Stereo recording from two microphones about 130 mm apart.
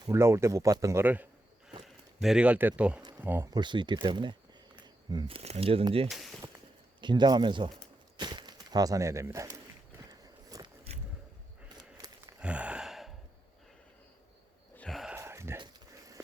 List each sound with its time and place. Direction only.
0.0 s speech: 20° right (ahead or behind)
3.5 s speech: 35° right (ahead or behind)
5.3 s speech: 50° right (ahead or behind)
6.1 s speech: centre (ahead or behind)
7.0 s speech: 35° right (ahead or behind)
10.1 s walk: 30° right (ahead or behind)
11.8 s a sound: 30° right (ahead or behind)
12.4 s gasp: 10° right (ahead or behind)
14.8 s a sound: centre (ahead or behind)
15.1 s a sound: 20° right (ahead or behind)